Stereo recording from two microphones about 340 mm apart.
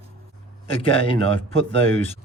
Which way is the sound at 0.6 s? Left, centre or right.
Centre.